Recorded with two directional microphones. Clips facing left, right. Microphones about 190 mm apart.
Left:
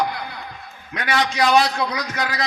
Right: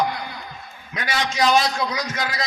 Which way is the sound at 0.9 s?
60° left (ahead or behind).